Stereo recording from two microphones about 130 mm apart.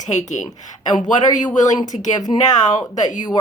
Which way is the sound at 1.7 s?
30° left (ahead or behind).